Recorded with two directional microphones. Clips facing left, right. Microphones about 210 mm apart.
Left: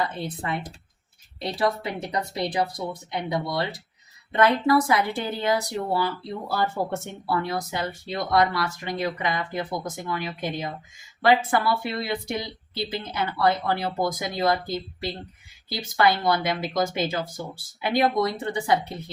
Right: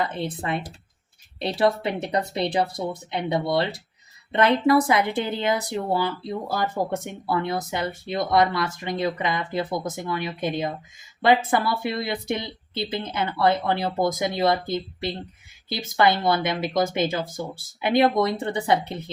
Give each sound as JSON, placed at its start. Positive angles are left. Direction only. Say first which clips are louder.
{"t": 0.0, "sound": "speech", "louder": "right 2 dB", "side_deg": -20}